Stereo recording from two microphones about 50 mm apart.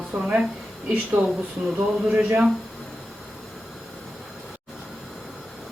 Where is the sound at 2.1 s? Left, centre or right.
Right.